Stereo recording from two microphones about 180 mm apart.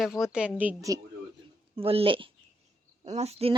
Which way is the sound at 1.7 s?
30° right (ahead or behind).